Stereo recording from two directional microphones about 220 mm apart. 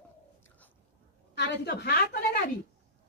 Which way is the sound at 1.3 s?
50° left (ahead or behind).